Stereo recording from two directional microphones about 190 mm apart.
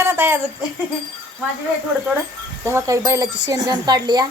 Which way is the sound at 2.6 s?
15° right (ahead or behind).